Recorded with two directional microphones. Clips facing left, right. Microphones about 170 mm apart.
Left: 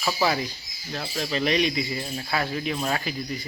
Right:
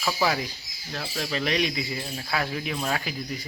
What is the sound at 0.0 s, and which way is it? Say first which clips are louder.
Speech: left 1 dB; 5° left (ahead or behind).